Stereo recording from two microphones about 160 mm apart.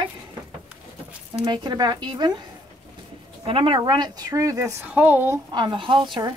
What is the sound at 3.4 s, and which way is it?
Speech, 35° right (ahead or behind).